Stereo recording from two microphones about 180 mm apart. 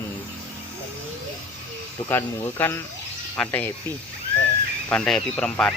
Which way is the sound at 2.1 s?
10° left (ahead or behind).